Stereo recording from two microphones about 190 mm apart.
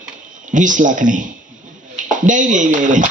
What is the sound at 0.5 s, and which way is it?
Speech, 40° right (ahead or behind).